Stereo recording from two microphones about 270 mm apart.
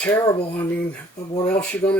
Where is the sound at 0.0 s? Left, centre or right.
Centre.